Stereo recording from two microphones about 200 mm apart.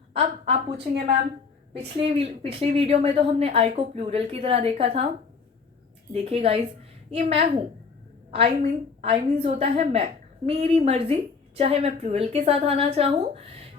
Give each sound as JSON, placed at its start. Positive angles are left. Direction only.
{"t": 0.1, "sound": "a woman's voice", "side_deg": -30}
{"t": 6.1, "sound": "a woman's voice", "side_deg": -30}